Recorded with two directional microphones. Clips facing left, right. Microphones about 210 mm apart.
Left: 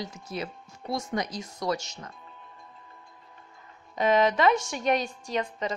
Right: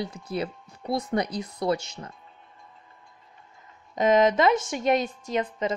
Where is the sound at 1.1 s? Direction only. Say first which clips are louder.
Right 4 dB; 30° right (ahead or behind).